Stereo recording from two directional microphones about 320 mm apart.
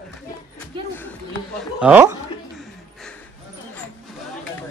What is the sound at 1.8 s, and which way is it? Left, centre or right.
Speech, centre.